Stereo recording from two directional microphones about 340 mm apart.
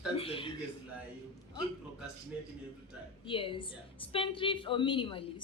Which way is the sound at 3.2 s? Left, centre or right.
Centre.